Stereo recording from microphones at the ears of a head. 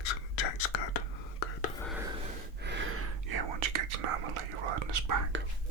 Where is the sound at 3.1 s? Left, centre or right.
Right.